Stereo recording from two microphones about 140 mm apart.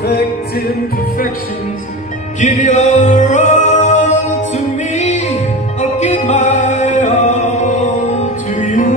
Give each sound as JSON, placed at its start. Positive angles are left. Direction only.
{"t": 2.4, "sound": "music", "side_deg": 55}